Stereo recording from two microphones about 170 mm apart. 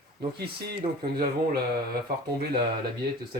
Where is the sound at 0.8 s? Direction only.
35° right (ahead or behind).